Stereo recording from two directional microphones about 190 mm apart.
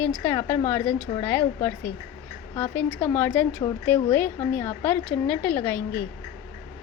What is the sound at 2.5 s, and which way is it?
A woman's voice, 10° left (ahead or behind).